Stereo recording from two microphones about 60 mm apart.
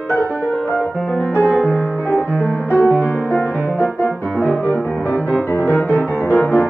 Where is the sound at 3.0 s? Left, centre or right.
Left.